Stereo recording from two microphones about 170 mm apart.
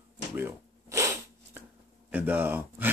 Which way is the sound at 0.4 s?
15° right (ahead or behind).